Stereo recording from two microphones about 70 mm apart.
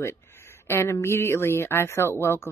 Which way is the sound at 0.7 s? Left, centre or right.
Left.